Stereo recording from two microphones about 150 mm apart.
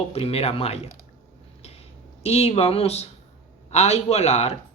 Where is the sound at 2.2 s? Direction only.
40° left (ahead or behind).